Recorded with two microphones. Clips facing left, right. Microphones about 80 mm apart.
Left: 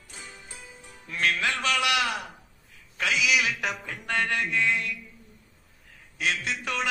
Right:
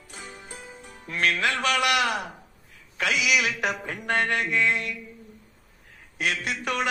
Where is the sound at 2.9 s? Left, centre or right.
Right.